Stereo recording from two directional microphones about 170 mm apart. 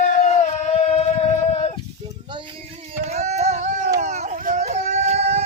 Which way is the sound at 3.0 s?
40° right (ahead or behind).